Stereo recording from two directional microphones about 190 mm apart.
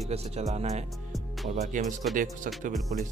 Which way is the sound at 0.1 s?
35° right (ahead or behind).